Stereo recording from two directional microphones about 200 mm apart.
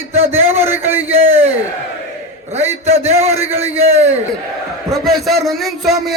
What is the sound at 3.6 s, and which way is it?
Speech, 30° right (ahead or behind).